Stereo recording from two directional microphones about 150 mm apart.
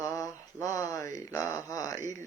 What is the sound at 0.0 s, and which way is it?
Mantra, 20° left (ahead or behind).